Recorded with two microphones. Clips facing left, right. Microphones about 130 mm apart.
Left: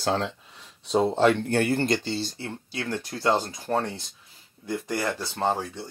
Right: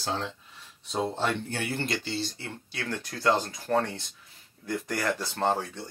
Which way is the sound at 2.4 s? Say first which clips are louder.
Left 4 dB; 25° left (ahead or behind).